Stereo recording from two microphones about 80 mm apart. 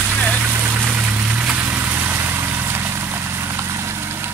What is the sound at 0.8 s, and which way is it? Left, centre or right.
Vehicle, centre.